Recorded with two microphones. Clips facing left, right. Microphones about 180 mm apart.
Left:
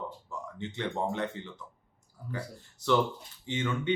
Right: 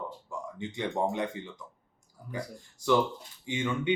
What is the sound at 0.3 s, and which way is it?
Speech, 15° right (ahead or behind).